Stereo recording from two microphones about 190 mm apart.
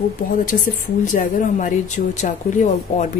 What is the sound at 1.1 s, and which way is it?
A woman's voice, 45° left (ahead or behind).